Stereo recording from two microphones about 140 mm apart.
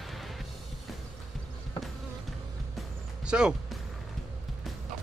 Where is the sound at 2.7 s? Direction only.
5° right (ahead or behind).